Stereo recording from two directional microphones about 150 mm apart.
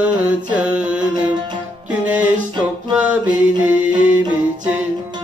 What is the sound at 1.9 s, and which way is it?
Music, 10° right (ahead or behind).